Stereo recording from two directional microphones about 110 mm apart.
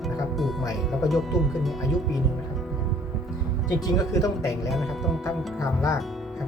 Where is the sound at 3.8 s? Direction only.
35° left (ahead or behind).